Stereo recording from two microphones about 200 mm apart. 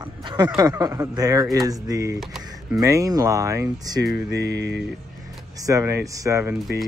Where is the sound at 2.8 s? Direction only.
15° right (ahead or behind).